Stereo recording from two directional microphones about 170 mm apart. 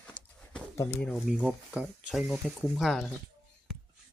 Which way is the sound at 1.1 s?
Centre (ahead or behind).